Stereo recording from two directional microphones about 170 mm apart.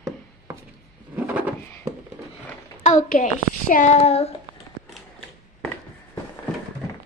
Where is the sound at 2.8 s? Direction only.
50° left (ahead or behind).